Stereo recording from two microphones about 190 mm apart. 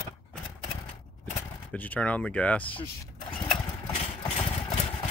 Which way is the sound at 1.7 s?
10° left (ahead or behind).